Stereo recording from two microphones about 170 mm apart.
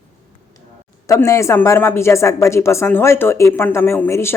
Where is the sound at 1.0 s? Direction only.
20° left (ahead or behind).